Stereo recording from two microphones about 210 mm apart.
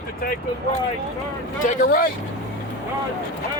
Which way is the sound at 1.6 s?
45° left (ahead or behind).